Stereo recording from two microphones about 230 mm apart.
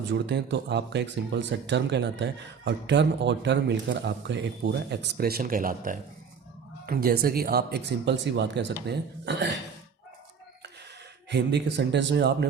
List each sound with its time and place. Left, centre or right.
0.1 s speech: right
11.3 s speech: right